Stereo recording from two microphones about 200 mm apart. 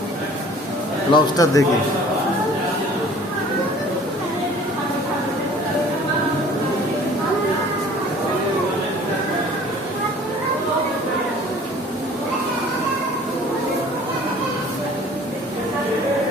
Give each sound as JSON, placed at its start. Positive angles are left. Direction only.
{"t": 1.1, "sound": "speech", "side_deg": 15}